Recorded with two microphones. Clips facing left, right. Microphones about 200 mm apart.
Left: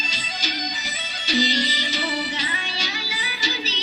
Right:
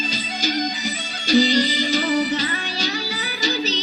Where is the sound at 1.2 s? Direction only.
40° right (ahead or behind).